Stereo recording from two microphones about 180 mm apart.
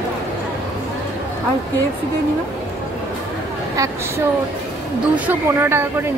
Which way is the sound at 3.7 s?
15° right (ahead or behind).